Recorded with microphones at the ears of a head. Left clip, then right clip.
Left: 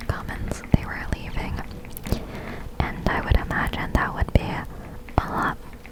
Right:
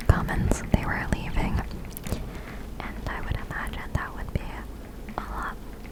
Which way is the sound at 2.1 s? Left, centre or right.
Left.